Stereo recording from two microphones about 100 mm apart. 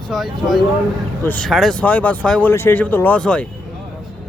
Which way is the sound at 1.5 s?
5° left (ahead or behind).